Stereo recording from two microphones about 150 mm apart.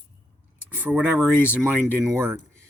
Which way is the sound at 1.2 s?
10° left (ahead or behind).